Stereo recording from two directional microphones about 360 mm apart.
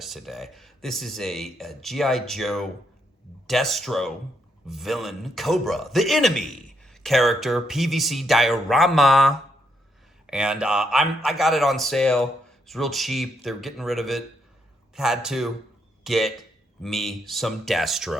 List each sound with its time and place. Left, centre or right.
0.0 s a man's voice: centre